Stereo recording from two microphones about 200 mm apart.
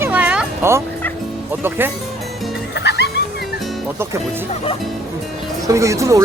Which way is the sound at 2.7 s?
55° left (ahead or behind).